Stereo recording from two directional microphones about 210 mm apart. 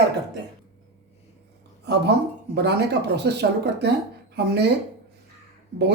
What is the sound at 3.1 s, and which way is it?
Speech, 55° right (ahead or behind).